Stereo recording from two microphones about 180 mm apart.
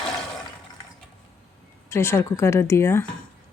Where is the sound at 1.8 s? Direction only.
15° left (ahead or behind).